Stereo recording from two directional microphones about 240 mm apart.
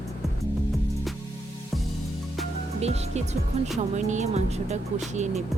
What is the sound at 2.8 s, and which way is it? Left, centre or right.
Speech, right.